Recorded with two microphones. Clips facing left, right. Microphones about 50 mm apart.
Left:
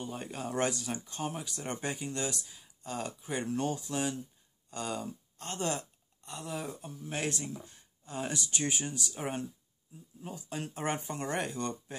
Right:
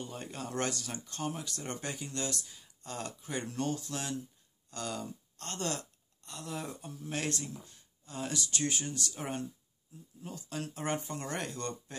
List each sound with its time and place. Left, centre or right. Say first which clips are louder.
0.0 s speech: left 3 dB; centre
6.5 s speech: left 1 dB; centre
7.2 s speech: left 1 dB; left